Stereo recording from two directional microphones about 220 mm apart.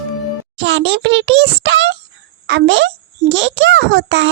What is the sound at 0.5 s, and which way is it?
Child singing, 55° right (ahead or behind).